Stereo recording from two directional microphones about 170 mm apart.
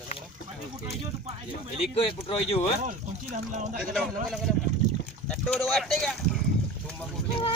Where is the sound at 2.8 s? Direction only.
45° right (ahead or behind).